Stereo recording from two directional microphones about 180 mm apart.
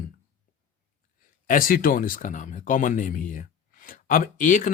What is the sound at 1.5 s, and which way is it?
Speech, 50° left (ahead or behind).